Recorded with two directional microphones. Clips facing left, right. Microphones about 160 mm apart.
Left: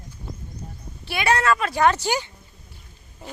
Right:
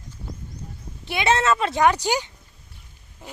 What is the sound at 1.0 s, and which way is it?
Speech, 20° right (ahead or behind).